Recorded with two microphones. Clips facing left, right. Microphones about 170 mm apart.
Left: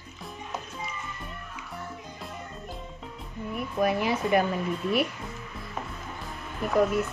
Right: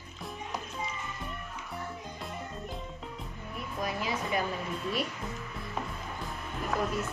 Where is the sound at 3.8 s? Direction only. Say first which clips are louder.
Left 8 dB; 65° left (ahead or behind).